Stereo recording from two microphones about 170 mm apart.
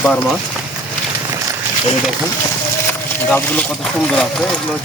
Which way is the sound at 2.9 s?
10° left (ahead or behind).